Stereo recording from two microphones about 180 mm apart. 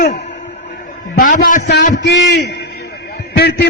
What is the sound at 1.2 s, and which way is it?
Speech, 50° left (ahead or behind).